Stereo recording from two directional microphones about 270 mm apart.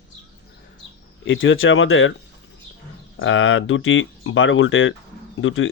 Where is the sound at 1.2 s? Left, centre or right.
Left.